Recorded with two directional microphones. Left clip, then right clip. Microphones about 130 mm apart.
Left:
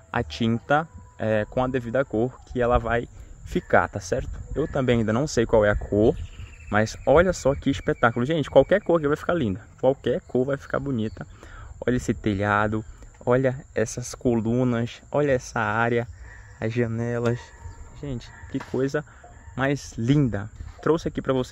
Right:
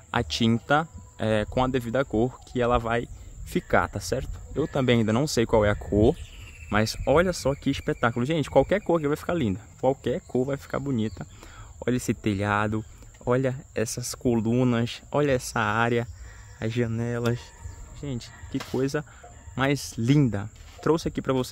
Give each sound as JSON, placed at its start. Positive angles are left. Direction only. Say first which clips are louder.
{"t": 0.1, "sound": "speech", "louder": "right 1 dB", "side_deg": -20}
{"t": 6.7, "sound": "speech", "louder": "left 3 dB", "side_deg": -5}
{"t": 14.5, "sound": "speech", "louder": "even", "side_deg": -20}
{"t": 16.5, "sound": "speech", "louder": "left 2 dB", "side_deg": 0}
{"t": 18.0, "sound": "speech", "louder": "left 1 dB", "side_deg": -10}